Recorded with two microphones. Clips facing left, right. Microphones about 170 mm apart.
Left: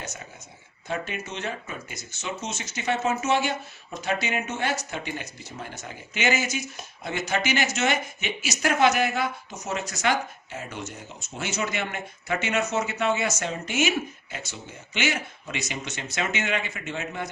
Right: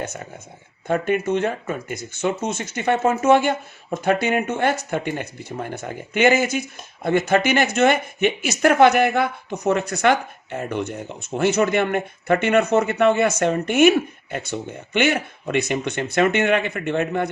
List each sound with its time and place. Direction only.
0.9 s speech: 55° right (ahead or behind)